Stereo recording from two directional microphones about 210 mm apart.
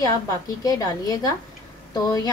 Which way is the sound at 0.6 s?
15° left (ahead or behind).